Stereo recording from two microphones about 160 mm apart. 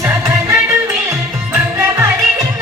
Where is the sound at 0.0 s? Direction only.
15° right (ahead or behind).